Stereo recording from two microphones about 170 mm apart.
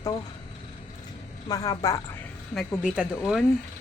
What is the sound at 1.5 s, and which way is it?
Speech, 20° left (ahead or behind).